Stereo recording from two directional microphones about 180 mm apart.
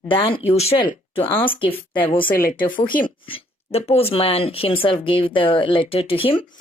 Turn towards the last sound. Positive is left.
turn(degrees=30)  # may be behind; listen again after turning